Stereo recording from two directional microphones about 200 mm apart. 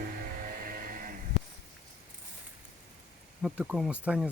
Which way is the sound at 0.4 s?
45° right (ahead or behind).